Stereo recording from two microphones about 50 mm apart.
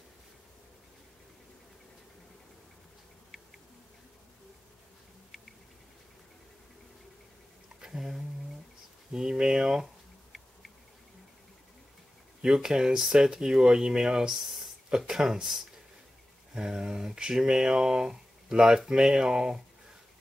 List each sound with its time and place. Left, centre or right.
7.8 s speech: centre
12.4 s speech: centre